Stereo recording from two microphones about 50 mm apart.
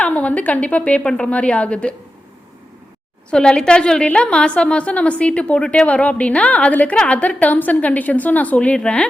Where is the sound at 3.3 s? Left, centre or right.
Centre.